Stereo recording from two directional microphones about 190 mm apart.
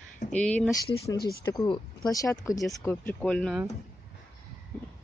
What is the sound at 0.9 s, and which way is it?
Speech, 15° left (ahead or behind).